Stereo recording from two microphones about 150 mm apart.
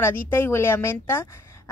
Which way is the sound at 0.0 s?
15° left (ahead or behind).